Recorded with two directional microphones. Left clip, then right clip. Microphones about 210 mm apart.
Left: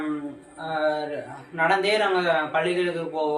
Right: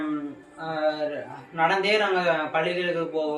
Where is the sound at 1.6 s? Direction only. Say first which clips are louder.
Left 1 dB; 15° left (ahead or behind).